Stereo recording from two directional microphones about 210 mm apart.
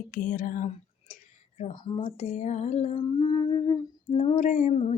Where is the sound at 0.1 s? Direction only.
40° left (ahead or behind).